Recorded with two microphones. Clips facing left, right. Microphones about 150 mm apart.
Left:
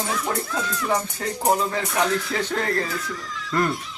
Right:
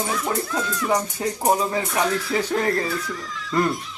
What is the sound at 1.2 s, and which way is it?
Music, 10° right (ahead or behind).